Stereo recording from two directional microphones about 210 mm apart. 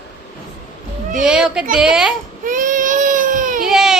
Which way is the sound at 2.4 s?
40° right (ahead or behind).